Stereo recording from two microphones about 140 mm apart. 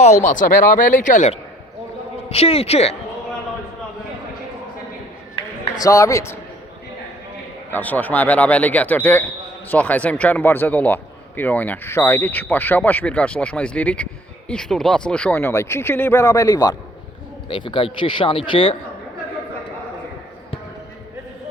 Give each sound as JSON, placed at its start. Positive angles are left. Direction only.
{"t": 0.0, "sound": "speech", "side_deg": 60}
{"t": 2.3, "sound": "speech", "side_deg": 45}
{"t": 5.7, "sound": "speech", "side_deg": 25}
{"t": 7.7, "sound": "speech", "side_deg": 10}
{"t": 15.4, "sound": "speech", "side_deg": 20}
{"t": 17.5, "sound": "speech", "side_deg": 35}